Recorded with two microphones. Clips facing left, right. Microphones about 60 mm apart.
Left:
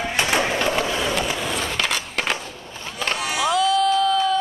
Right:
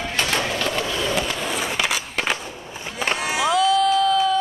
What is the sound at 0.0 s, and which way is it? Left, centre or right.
Skateboard, centre.